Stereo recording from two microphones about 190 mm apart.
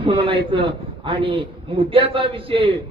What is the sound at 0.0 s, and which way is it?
A man's voice, 30° right (ahead or behind).